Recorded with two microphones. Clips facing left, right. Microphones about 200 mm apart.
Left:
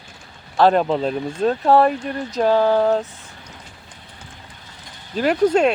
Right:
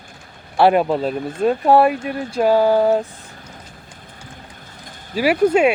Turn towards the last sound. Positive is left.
turn(degrees=-10)  # may be behind; listen again after turning